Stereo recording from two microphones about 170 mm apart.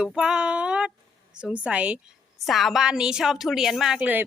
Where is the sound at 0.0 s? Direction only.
5° right (ahead or behind).